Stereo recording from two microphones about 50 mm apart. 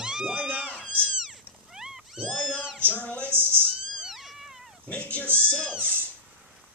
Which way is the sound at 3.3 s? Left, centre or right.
Right.